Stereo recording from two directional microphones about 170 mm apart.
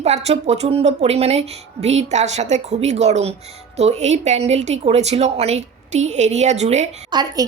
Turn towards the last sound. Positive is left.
turn(degrees=-25)  # may be behind; listen again after turning